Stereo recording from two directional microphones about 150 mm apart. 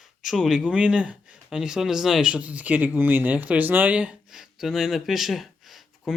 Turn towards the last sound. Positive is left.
turn(degrees=0)  # may be behind; listen again after turning